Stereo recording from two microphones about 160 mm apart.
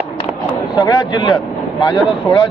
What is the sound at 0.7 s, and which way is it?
Speech, 25° left (ahead or behind).